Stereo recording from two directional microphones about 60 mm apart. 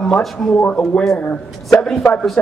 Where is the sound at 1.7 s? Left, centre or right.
Centre.